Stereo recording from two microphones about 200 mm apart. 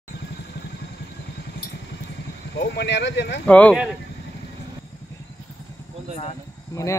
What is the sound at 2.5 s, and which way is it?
Speech, 60° left (ahead or behind).